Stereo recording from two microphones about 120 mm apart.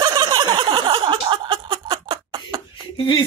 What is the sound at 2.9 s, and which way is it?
Speech, 45° left (ahead or behind).